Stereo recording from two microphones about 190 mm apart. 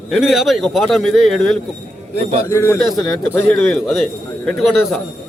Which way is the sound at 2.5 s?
15° left (ahead or behind).